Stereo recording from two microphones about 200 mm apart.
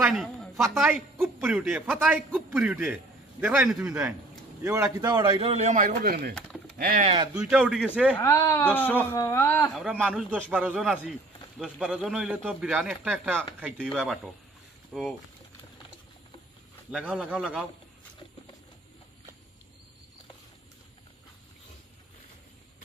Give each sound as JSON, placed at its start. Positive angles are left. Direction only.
{"t": 0.0, "sound": "a sound", "side_deg": 0}
{"t": 0.7, "sound": "a man's voice", "side_deg": -5}
{"t": 5.0, "sound": "speech", "side_deg": -20}
{"t": 7.3, "sound": "a man's voice", "side_deg": -5}
{"t": 8.1, "sound": "speech", "side_deg": 15}
{"t": 9.8, "sound": "a man's voice", "side_deg": -5}
{"t": 16.9, "sound": "a man's voice", "side_deg": -5}